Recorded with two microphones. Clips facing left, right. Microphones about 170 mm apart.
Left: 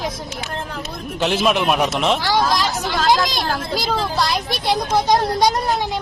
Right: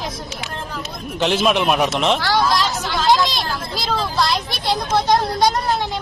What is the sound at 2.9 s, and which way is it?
Speech, 50° left (ahead or behind).